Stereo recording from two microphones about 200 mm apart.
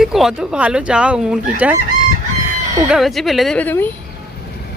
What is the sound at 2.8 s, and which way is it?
Speech, centre (ahead or behind).